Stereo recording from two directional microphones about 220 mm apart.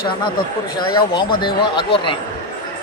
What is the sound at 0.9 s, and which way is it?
Speech, 20° left (ahead or behind).